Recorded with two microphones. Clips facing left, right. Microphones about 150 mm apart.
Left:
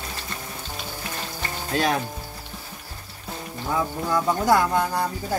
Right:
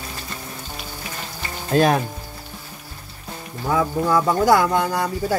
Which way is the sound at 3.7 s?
90° right.